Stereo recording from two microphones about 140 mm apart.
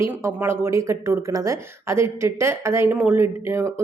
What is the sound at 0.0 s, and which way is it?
Speech, 20° right (ahead or behind).